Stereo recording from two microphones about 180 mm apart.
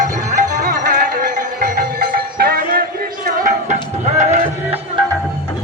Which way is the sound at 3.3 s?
45° right (ahead or behind).